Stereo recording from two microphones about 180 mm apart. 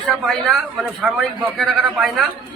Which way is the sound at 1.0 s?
Centre (ahead or behind).